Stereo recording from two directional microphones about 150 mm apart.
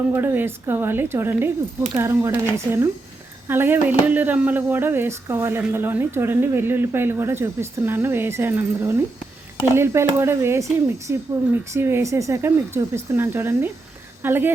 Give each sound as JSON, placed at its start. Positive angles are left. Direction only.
{"t": 0.1, "sound": "speech", "side_deg": -15}